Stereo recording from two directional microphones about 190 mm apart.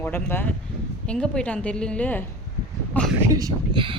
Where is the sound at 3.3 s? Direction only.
20° right (ahead or behind).